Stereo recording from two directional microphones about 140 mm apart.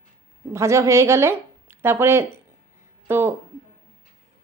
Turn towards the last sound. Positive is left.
turn(degrees=-15)  # may be behind; listen again after turning